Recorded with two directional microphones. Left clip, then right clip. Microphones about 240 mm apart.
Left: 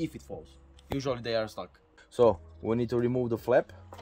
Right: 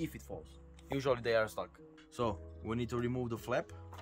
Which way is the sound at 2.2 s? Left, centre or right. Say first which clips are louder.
Left 14 dB; centre.